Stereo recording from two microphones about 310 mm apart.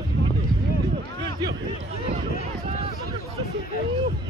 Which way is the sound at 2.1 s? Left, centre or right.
Right.